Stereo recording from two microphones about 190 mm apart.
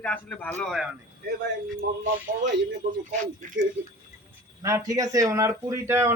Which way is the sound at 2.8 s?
45° right (ahead or behind).